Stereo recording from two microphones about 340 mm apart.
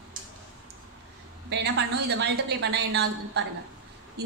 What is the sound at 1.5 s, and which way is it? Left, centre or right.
A woman's voice, right.